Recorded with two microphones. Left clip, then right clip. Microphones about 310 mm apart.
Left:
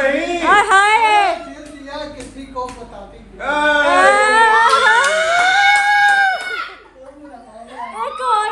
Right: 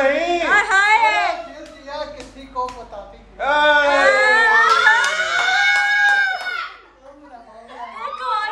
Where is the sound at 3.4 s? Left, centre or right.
Right.